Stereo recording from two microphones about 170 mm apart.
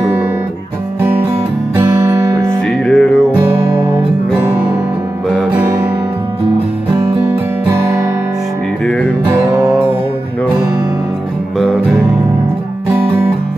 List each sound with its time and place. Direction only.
2.9 s music: 5° left (ahead or behind)
3.6 s music: 15° right (ahead or behind)
5.3 s music: 10° right (ahead or behind)
7.2 s guitar: 15° right (ahead or behind)